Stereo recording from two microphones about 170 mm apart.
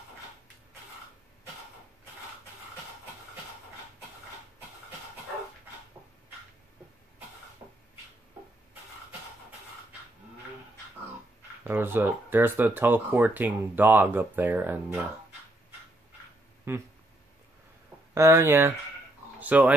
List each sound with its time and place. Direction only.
7.6 s a sound: 20° right (ahead or behind)
11.6 s speech: 10° right (ahead or behind)
16.7 s speech: 15° right (ahead or behind)
18.1 s speech: 15° right (ahead or behind)